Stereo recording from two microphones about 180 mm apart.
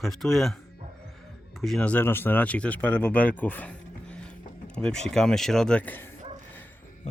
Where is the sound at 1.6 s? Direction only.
5° left (ahead or behind).